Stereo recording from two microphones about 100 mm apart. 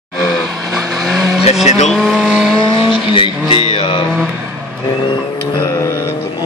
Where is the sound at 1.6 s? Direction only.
5° left (ahead or behind).